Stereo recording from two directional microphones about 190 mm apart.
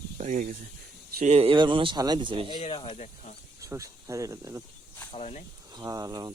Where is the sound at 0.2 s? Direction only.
40° right (ahead or behind); by 2.5 s 25° right (ahead or behind).